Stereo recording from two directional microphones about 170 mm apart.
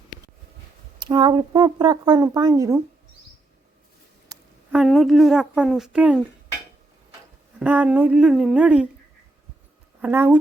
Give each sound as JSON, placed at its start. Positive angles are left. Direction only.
{"t": 0.9, "sound": "speech", "side_deg": -25}
{"t": 4.3, "sound": "a sound", "side_deg": -20}
{"t": 4.7, "sound": "a woman's voice", "side_deg": 0}
{"t": 7.6, "sound": "speech", "side_deg": -10}
{"t": 10.0, "sound": "speech", "side_deg": -10}